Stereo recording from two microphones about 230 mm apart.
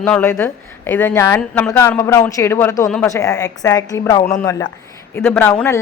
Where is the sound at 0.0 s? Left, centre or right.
Centre.